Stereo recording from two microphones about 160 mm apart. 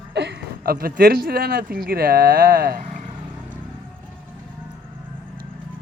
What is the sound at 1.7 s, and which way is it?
Speech, 70° right (ahead or behind).